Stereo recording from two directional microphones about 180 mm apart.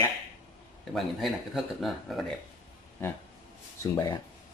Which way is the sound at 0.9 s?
Centre (ahead or behind).